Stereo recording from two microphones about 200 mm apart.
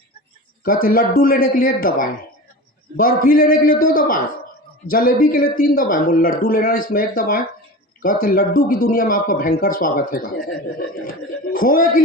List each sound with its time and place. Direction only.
0.6 s speech: 45° left (ahead or behind)